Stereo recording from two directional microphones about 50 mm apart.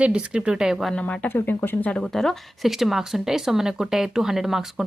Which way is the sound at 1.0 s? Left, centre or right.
Left.